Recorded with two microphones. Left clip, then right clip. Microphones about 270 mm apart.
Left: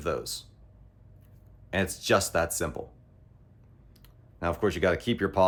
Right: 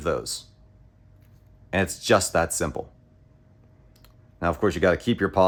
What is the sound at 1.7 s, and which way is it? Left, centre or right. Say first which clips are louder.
Speech: right 4 dB; right.